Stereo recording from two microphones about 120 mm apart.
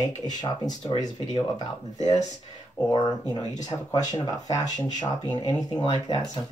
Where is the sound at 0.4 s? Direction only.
35° left (ahead or behind).